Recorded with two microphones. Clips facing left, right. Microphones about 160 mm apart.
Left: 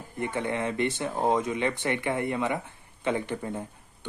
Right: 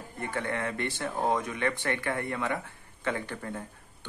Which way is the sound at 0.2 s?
20° left (ahead or behind).